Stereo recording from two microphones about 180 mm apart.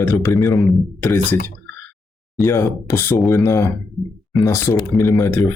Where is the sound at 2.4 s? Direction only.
Centre (ahead or behind).